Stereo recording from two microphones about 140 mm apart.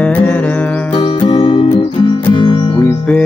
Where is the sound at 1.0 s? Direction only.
45° left (ahead or behind).